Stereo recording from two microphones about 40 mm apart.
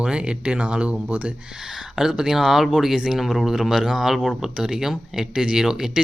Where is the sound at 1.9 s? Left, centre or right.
Centre.